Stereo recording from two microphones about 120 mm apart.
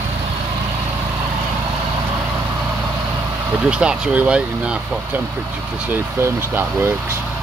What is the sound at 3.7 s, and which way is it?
Speech, 10° right (ahead or behind).